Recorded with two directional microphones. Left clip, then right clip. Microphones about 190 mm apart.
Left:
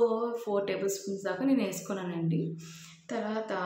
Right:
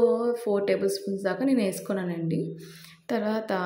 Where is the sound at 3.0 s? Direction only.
35° right (ahead or behind).